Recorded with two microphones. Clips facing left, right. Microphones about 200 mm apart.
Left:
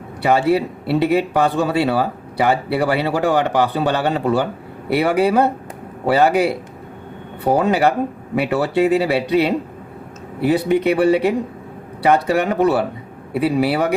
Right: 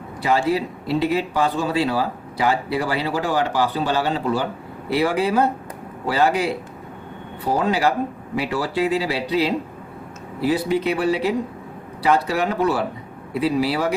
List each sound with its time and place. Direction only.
0.2 s speech: 65° left (ahead or behind)
7.4 s speech: 60° left (ahead or behind)